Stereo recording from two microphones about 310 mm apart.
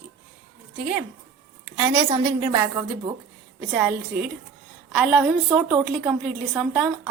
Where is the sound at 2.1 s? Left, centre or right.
Centre.